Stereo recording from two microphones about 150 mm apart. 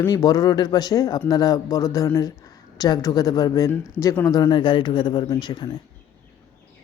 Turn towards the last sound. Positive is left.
turn(degrees=30)  # may be behind; listen again after turning